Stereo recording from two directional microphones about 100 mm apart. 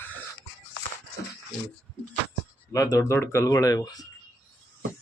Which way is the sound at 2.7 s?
35° left (ahead or behind).